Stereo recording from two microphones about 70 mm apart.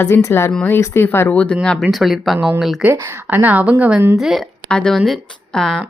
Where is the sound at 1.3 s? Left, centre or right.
Centre.